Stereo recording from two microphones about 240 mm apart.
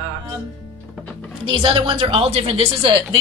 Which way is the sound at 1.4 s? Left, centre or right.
Right.